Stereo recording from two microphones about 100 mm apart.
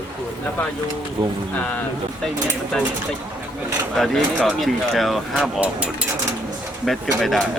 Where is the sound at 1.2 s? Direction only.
45° right (ahead or behind).